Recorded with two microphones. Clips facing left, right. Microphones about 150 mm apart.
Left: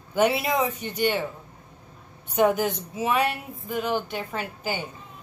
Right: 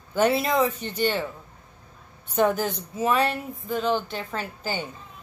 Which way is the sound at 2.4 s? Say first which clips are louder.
Left 1 dB; 15° left (ahead or behind).